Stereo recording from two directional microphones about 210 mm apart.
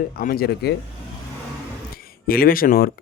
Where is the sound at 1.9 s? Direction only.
45° left (ahead or behind).